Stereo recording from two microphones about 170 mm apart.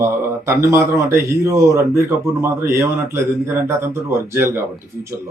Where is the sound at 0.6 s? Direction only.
15° right (ahead or behind).